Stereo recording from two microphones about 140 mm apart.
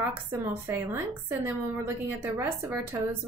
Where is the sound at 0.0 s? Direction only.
15° right (ahead or behind).